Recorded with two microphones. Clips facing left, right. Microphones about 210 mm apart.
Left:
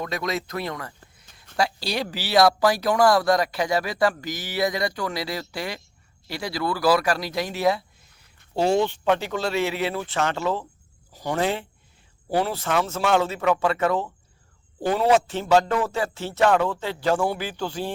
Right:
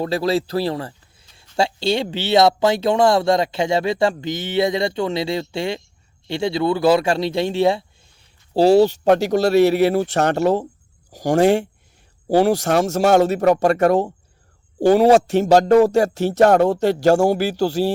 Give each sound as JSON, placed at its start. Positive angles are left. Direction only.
{"t": 0.0, "sound": "speech", "side_deg": -30}
{"t": 10.3, "sound": "speech", "side_deg": -70}
{"t": 11.3, "sound": "speech", "side_deg": -45}
{"t": 12.4, "sound": "speech", "side_deg": -80}
{"t": 12.9, "sound": "speech", "side_deg": -45}
{"t": 15.4, "sound": "speech", "side_deg": -40}
{"t": 16.8, "sound": "speech", "side_deg": -75}
{"t": 17.1, "sound": "speech", "side_deg": -45}
{"t": 17.4, "sound": "speech", "side_deg": -75}